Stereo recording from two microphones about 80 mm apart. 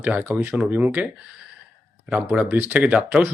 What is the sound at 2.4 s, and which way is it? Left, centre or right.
Speech, right.